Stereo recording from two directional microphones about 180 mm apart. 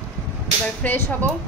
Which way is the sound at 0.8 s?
10° left (ahead or behind).